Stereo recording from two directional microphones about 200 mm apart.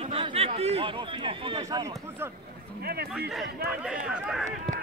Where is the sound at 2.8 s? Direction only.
50° right (ahead or behind).